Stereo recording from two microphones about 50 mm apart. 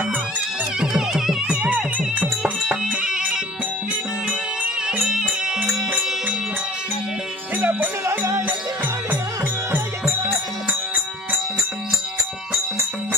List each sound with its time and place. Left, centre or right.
0.7 s music: centre
1.5 s music: right
5.6 s music: right
7.5 s music: right
8.0 s music: right